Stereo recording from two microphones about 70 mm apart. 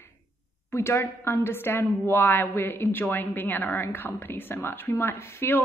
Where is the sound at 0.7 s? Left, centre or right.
Left.